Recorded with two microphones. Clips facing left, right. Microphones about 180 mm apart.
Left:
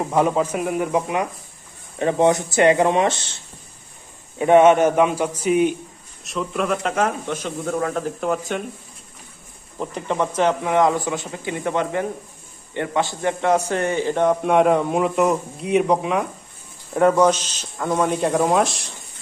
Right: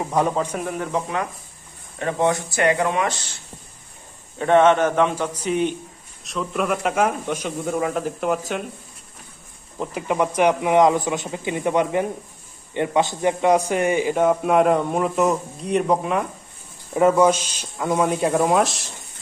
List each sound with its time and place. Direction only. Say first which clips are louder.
0.0 s a man's voice: left 2 dB; 5° left (ahead or behind); by 3.3 s 25° left (ahead or behind)
4.4 s a man's voice: left 3 dB; 10° left (ahead or behind)
9.8 s a man's voice: right 1 dB; 10° right (ahead or behind)